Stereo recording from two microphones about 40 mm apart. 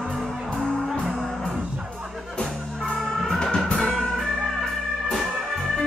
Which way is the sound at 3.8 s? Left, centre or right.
Left.